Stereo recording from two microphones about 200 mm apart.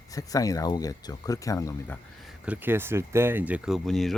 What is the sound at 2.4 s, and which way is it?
Speech, 10° right (ahead or behind).